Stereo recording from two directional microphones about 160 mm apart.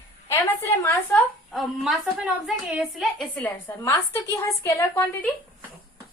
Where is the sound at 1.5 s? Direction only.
Centre (ahead or behind).